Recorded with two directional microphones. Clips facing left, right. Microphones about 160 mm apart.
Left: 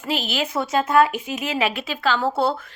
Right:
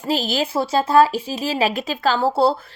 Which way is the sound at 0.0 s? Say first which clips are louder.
Right 4 dB; 35° right (ahead or behind).